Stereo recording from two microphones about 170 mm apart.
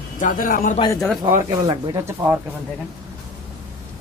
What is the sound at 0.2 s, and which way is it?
Speech, 55° left (ahead or behind).